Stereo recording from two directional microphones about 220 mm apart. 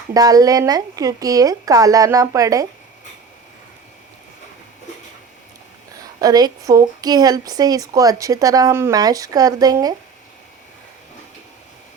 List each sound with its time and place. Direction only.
0.1 s a woman's voice: 15° right (ahead or behind)
6.1 s a woman's voice: 15° right (ahead or behind)